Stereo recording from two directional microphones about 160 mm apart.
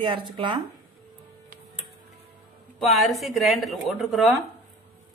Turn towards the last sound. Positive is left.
turn(degrees=0)  # may be behind; listen again after turning